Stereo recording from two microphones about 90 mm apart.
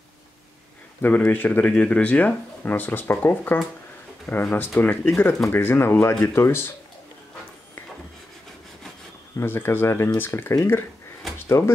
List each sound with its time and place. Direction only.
1.0 s speech: 20° left (ahead or behind)
9.4 s speech: 25° left (ahead or behind)
11.3 s drawer open or close: 30° left (ahead or behind)